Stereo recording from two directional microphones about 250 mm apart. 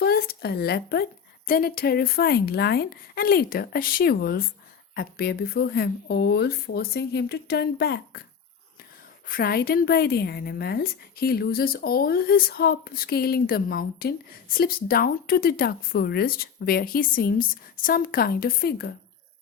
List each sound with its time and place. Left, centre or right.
0.0 s a sound: left
1.5 s a woman's voice: left
9.2 s a woman's voice: left